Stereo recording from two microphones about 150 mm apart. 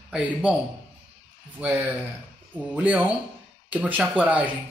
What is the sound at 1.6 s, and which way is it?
Speech, 10° right (ahead or behind).